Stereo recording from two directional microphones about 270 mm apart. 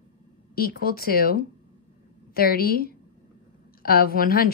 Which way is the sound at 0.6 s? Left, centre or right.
Left.